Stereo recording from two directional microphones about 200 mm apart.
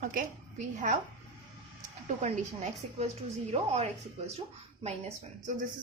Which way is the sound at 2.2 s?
35° right (ahead or behind).